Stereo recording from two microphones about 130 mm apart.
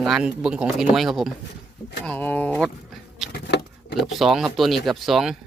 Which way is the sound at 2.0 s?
10° left (ahead or behind).